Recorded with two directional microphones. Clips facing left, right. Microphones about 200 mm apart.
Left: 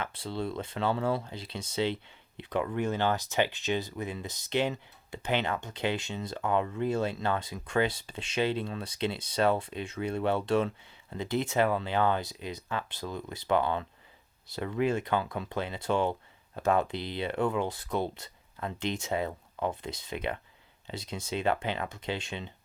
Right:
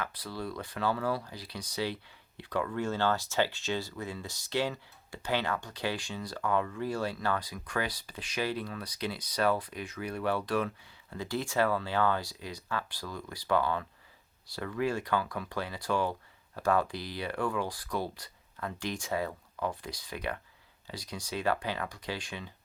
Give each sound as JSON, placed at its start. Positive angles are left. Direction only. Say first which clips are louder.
{"t": 0.0, "sound": "speech", "louder": "left 3 dB", "side_deg": 25}